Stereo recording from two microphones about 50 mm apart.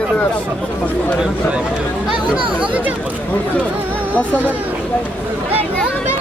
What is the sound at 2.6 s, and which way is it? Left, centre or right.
Speech, right.